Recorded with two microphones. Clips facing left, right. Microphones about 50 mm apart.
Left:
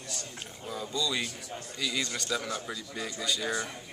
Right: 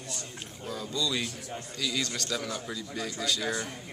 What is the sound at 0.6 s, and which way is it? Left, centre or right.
Speech, centre.